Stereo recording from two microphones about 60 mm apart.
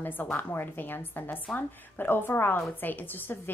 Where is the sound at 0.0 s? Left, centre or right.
Left.